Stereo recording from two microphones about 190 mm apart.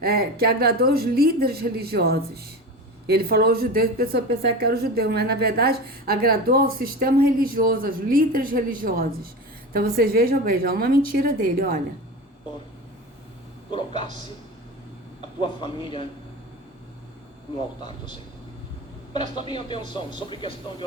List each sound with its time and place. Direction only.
0.0 s a woman's voice: 55° right (ahead or behind)
15.4 s speech: 25° left (ahead or behind)
19.1 s speech: 25° left (ahead or behind)